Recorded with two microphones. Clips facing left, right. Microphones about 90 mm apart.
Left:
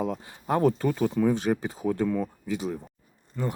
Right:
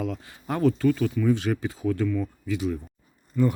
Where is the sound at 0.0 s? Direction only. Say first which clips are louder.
Left 1 dB; 25° left (ahead or behind).